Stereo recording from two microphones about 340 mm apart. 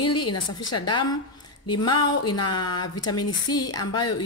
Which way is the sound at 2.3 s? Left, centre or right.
Left.